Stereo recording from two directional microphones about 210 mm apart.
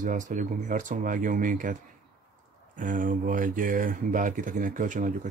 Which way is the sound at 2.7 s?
40° right (ahead or behind).